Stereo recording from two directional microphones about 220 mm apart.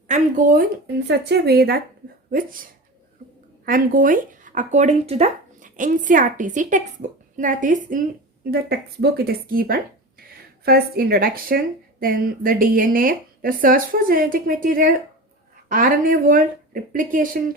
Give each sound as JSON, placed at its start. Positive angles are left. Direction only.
{"t": 0.1, "sound": "speech", "side_deg": -35}
{"t": 1.0, "sound": "a woman's voice", "side_deg": -50}
{"t": 3.7, "sound": "speech", "side_deg": -40}